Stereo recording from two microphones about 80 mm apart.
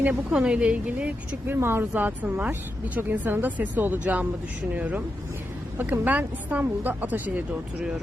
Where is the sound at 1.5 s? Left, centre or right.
Right.